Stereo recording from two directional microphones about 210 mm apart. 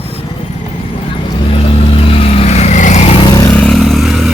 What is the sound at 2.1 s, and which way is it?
Vehicle, 30° left (ahead or behind).